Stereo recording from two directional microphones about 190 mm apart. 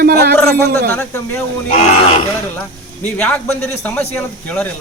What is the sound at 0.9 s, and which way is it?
Speech, 10° left (ahead or behind).